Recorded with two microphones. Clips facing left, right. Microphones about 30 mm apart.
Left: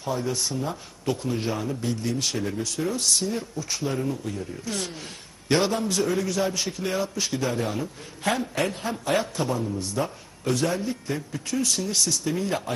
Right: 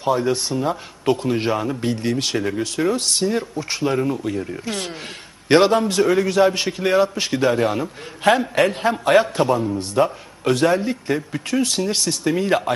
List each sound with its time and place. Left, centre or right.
0.0 s speech: right